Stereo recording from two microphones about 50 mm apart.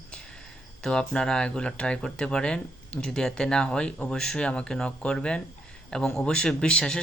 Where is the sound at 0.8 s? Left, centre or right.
Centre.